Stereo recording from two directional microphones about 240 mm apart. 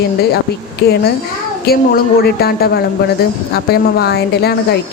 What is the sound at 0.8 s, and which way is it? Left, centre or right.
Speech, left.